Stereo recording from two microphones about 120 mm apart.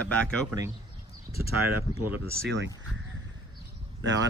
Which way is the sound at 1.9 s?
20° right (ahead or behind).